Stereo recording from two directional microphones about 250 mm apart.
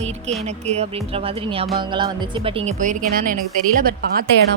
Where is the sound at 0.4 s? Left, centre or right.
Right.